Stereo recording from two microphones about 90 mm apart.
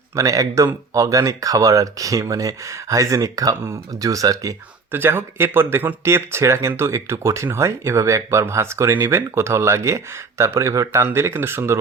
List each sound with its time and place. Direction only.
0.2 s speech: 40° right (ahead or behind)
4.9 s speech: 25° right (ahead or behind)